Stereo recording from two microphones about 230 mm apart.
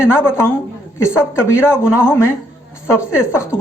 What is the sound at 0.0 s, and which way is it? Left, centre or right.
A woman's voice, centre.